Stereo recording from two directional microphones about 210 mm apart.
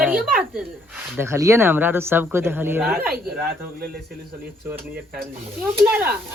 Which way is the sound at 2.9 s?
45° right (ahead or behind).